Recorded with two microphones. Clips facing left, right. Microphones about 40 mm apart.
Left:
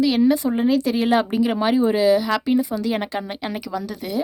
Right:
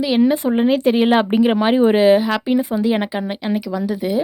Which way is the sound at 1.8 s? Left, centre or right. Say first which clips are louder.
Right 4 dB; right.